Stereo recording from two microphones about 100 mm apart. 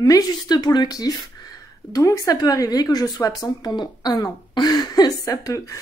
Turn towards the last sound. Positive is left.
turn(degrees=35)  # may be behind; listen again after turning